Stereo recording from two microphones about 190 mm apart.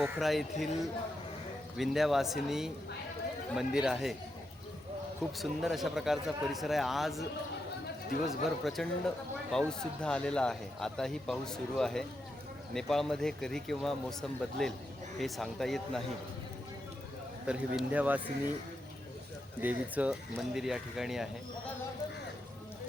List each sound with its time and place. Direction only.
0.2 s a man's voice: centre (ahead or behind)
1.7 s a man's voice: centre (ahead or behind)
5.4 s a man's voice: centre (ahead or behind)
8.3 s a man's voice: centre (ahead or behind)
17.4 s speech: 5° right (ahead or behind)
19.6 s a man's voice: 5° right (ahead or behind)